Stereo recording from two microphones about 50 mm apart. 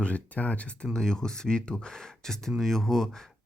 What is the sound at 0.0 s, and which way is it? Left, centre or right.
Speech, left.